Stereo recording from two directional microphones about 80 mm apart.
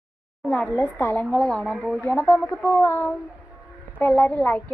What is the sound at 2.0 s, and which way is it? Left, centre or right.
A woman's voice, centre.